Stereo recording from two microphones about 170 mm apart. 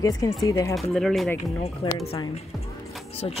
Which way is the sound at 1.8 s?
30° left (ahead or behind).